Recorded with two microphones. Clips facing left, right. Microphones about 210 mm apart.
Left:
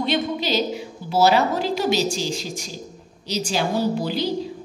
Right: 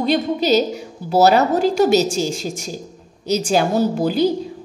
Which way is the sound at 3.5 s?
50° right (ahead or behind).